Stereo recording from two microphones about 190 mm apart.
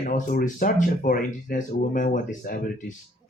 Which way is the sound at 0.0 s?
45° left (ahead or behind).